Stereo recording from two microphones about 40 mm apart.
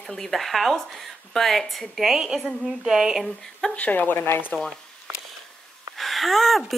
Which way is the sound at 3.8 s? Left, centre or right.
Left.